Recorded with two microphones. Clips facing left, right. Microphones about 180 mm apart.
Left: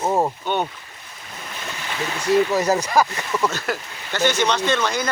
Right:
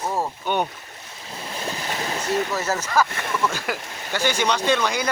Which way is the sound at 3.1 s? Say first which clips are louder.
Left 2 dB; 55° right (ahead or behind).